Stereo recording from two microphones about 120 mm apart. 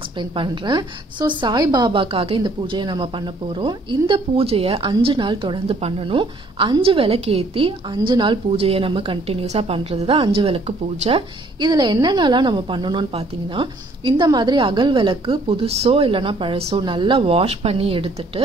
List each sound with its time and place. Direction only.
0.2 s a woman's voice: 40° right (ahead or behind)
11.7 s a woman's voice: 35° right (ahead or behind)